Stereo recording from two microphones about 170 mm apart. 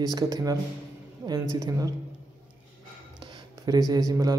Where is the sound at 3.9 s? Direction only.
20° right (ahead or behind).